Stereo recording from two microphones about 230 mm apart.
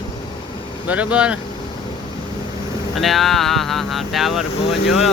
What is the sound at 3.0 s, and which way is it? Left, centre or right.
Speech, centre.